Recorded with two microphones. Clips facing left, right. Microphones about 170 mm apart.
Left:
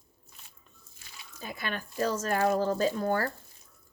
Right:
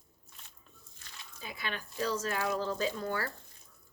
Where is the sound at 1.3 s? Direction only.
45° left (ahead or behind).